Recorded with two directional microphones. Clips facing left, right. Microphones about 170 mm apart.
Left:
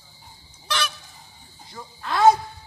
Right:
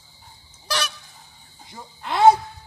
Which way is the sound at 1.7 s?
20° right (ahead or behind).